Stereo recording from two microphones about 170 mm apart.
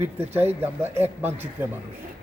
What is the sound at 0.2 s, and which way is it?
Speech, 15° right (ahead or behind).